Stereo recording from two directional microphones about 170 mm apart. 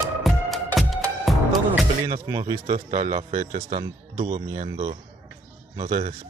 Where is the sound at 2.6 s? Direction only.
45° right (ahead or behind).